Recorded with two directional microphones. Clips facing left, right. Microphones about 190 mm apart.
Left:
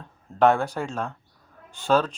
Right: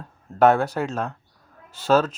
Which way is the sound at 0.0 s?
5° right (ahead or behind).